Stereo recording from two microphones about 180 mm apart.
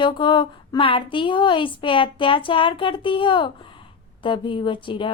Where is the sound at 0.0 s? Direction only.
25° left (ahead or behind).